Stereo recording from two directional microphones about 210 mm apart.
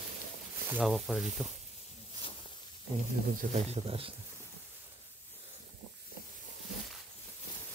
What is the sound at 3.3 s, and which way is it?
Speech, 30° right (ahead or behind).